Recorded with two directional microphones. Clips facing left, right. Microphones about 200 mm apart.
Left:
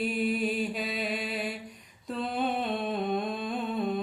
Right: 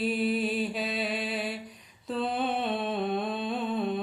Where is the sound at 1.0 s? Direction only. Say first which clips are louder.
Right 1 dB; centre (ahead or behind).